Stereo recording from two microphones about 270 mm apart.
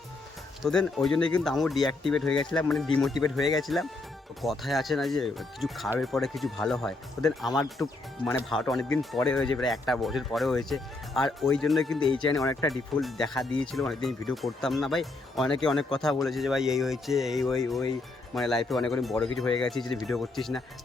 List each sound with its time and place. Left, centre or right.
0.6 s speech: centre